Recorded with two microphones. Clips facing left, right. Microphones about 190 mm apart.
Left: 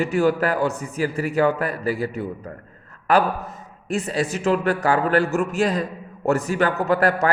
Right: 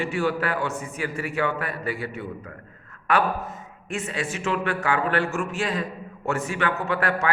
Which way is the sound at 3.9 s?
35° left (ahead or behind).